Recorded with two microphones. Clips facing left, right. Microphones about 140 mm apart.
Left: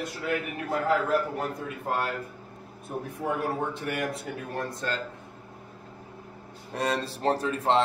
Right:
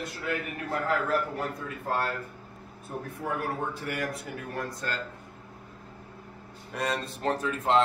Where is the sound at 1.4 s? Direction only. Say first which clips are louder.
Left 2 dB; 20° left (ahead or behind).